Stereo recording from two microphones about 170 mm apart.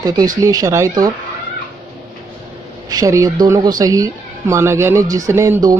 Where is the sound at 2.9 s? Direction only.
20° right (ahead or behind).